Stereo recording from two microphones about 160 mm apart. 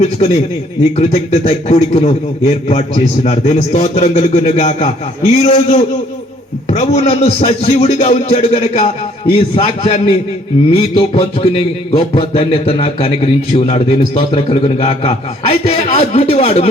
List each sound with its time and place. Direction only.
0.9 s a man's voice: 45° left (ahead or behind)